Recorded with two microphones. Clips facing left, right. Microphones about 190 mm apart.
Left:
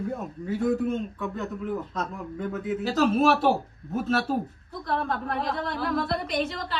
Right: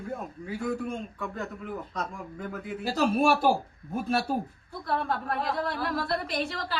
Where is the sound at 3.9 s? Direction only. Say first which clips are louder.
Left 2 dB; 10° right (ahead or behind).